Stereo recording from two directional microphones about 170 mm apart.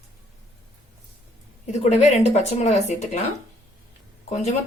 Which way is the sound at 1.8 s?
40° left (ahead or behind).